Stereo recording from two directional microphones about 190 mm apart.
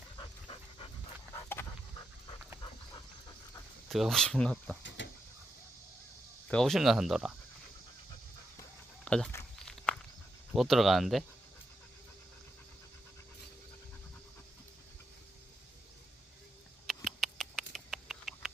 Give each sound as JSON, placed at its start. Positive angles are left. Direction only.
{"t": 3.8, "sound": "speech", "side_deg": 0}
{"t": 5.0, "sound": "a sound", "side_deg": 70}
{"t": 6.5, "sound": "speech", "side_deg": 0}
{"t": 9.0, "sound": "walk", "side_deg": 5}
{"t": 10.5, "sound": "speech", "side_deg": 0}
{"t": 16.8, "sound": "rodents", "side_deg": 0}